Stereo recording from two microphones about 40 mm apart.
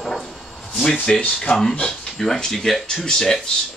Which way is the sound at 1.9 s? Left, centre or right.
Centre.